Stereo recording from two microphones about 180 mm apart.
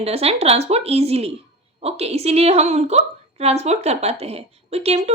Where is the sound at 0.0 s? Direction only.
35° right (ahead or behind).